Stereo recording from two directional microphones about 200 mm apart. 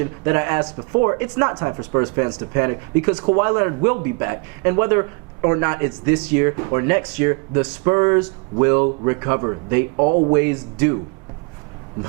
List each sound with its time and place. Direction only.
0.0 s a man's voice: 15° right (ahead or behind); by 10.3 s 30° right (ahead or behind)
10.3 s a man's voice: 15° right (ahead or behind)